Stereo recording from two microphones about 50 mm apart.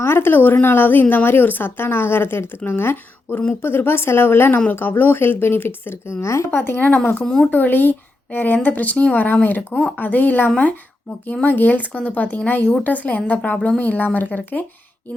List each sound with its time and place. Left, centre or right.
0.0 s speech: left
6.5 s speech: left